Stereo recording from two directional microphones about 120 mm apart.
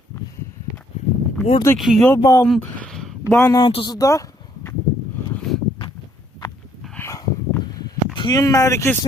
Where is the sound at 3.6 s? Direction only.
45° left (ahead or behind).